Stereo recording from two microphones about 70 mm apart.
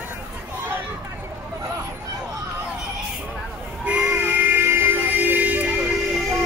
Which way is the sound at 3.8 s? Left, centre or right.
Centre.